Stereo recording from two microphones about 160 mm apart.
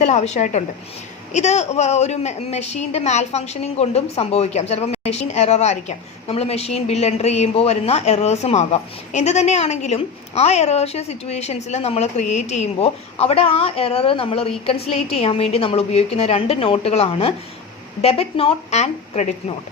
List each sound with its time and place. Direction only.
0.0 s a woman's voice: 45° left (ahead or behind)